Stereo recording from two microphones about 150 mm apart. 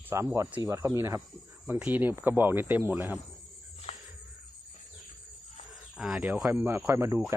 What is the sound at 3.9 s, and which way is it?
Cricket, 50° left (ahead or behind).